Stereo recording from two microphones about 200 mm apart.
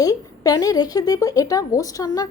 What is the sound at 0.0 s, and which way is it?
A woman's voice, 20° left (ahead or behind).